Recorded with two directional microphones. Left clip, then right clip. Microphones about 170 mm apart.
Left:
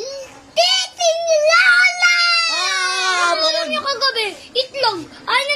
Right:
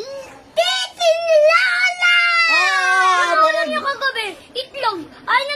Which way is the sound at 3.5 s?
5° left (ahead or behind).